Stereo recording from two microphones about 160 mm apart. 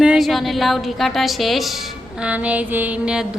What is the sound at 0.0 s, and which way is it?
A woman's voice, 5° right (ahead or behind).